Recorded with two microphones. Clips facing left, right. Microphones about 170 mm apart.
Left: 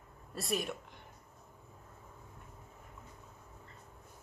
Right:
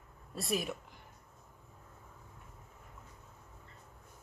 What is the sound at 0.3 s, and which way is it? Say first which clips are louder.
Speech: right 1 dB; centre (ahead or behind).